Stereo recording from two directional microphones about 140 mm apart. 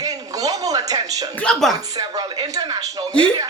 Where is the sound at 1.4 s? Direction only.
5° left (ahead or behind).